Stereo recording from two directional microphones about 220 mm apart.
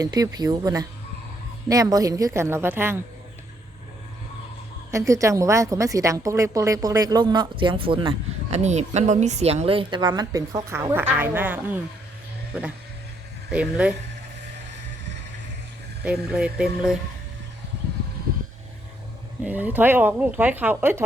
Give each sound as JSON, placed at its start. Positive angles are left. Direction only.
{"t": 0.0, "sound": "a woman's voice", "side_deg": -15}
{"t": 4.9, "sound": "a woman's voice", "side_deg": -15}
{"t": 16.0, "sound": "speech", "side_deg": -5}
{"t": 19.4, "sound": "a woman's voice", "side_deg": -10}